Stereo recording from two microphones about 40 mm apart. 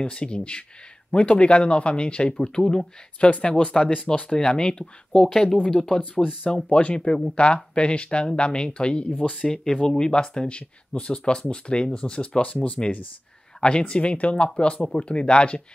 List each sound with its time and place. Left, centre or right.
0.0 s speech: left
3.2 s speech: left
3.4 s speech: left
5.9 s speech: left
12.4 s speech: left
13.6 s speech: left